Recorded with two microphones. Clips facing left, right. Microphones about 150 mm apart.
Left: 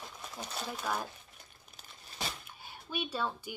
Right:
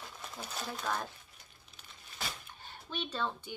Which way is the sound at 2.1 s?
10° left (ahead or behind).